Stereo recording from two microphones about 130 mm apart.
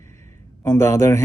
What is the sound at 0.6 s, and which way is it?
Speech, 20° left (ahead or behind).